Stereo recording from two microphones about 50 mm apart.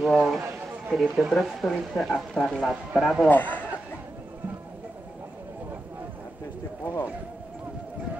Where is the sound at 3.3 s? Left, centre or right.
Left.